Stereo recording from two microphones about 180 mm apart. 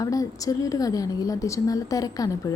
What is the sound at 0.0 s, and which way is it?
A woman's voice, 20° left (ahead or behind).